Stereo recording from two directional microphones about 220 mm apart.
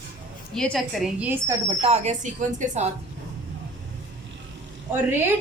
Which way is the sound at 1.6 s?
30° right (ahead or behind).